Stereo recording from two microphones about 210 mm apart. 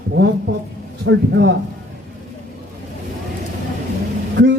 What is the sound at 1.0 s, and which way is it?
Speech, 55° right (ahead or behind).